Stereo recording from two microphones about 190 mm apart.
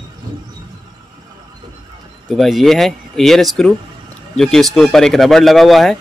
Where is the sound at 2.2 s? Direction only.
Centre (ahead or behind).